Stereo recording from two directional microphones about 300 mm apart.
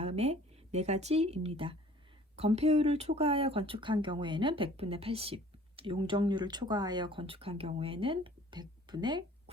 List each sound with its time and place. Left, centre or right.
0.0 s speech: centre